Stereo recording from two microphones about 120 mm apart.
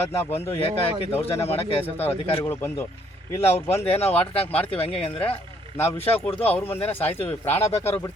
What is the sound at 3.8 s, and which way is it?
Speech, 55° left (ahead or behind).